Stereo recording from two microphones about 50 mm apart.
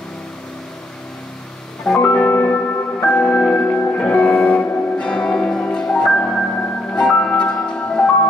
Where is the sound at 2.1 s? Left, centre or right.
Left.